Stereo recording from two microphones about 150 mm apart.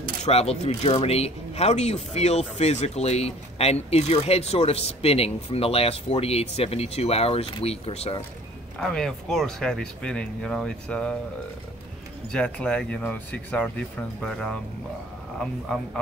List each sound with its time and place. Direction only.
0.2 s speech: 45° left (ahead or behind)
8.7 s speech: 5° left (ahead or behind)
12.3 s speech: 5° left (ahead or behind)